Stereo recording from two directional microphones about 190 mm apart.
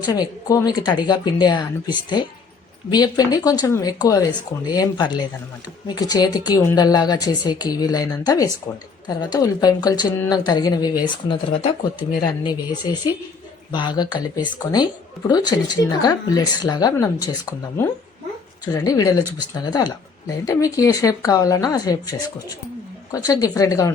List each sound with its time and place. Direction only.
0.0 s a woman's voice: 20° left (ahead or behind)